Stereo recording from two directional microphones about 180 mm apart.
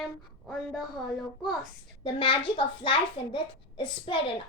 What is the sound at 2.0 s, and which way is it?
A woman's voice, 25° left (ahead or behind).